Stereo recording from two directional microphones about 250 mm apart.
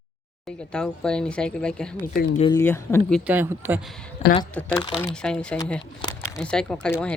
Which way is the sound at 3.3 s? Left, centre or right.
Centre.